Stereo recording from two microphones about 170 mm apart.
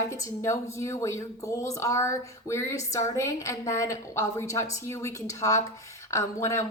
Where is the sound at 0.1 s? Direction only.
15° left (ahead or behind).